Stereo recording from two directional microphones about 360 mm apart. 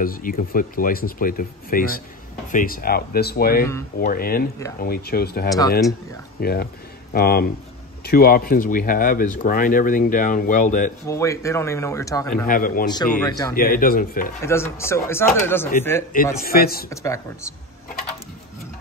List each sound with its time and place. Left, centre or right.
0.0 s speech: left
11.1 s speech: centre
12.4 s speech: left
12.8 s speech: centre
13.6 s speech: left
14.4 s speech: centre
16.3 s speech: left
16.9 s speech: centre